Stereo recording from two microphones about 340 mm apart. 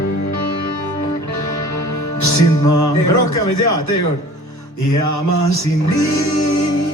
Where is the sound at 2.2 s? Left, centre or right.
Left.